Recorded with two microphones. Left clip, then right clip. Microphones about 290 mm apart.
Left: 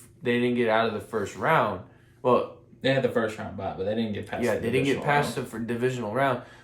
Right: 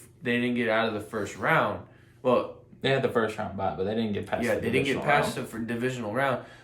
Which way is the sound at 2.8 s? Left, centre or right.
Centre.